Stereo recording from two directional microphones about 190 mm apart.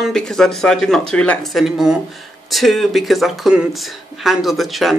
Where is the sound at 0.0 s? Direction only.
Centre (ahead or behind).